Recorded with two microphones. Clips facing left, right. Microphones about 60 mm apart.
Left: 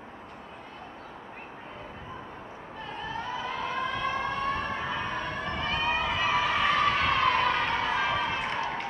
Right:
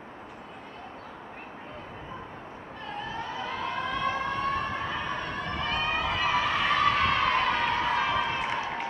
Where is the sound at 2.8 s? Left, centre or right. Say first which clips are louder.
Even; centre.